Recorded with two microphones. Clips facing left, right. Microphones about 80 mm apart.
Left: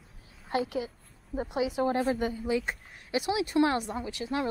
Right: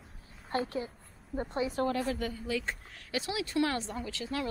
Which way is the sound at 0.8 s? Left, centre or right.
Centre.